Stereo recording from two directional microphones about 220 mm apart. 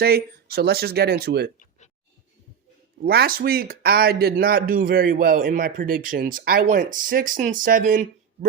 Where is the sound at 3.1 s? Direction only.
45° right (ahead or behind).